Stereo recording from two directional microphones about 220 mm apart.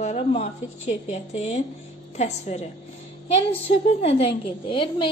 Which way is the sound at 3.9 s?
25° left (ahead or behind).